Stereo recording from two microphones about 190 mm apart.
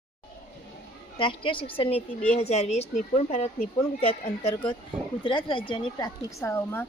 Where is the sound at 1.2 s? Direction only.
25° left (ahead or behind).